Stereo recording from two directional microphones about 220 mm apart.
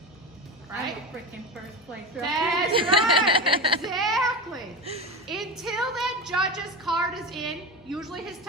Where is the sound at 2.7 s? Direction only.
25° right (ahead or behind).